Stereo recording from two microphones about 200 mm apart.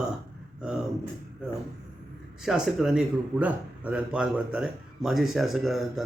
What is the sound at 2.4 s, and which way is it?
A man's voice, centre (ahead or behind).